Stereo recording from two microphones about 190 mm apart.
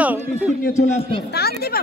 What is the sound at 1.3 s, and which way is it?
Speech, 55° left (ahead or behind).